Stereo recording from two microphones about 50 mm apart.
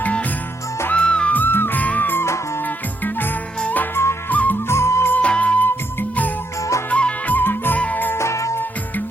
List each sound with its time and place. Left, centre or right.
0.0 s music: left
1.3 s music: left
4.3 s music: left
4.7 s music: left
5.2 s music: left
8.1 s music: left